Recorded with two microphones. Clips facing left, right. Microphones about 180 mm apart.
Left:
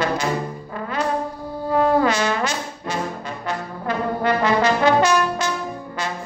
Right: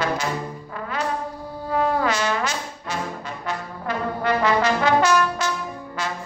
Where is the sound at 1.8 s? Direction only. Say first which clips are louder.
Left 4 dB; 5° right (ahead or behind).